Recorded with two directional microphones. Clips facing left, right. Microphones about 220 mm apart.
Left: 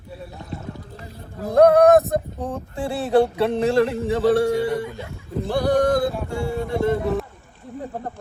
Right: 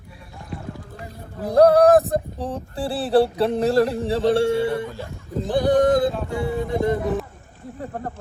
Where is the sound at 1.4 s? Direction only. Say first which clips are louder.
Even; 35° right (ahead or behind).